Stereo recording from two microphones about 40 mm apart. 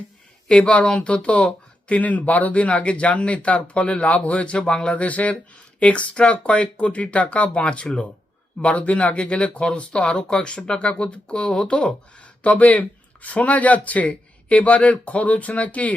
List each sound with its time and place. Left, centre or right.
0.4 s speech: left
4.9 s speech: left